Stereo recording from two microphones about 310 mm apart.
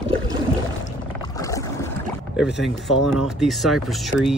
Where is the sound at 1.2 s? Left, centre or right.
Centre.